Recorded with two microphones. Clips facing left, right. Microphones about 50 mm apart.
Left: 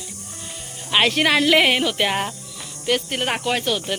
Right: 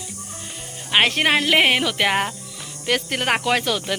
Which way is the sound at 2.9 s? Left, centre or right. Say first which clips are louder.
Right 1 dB; right.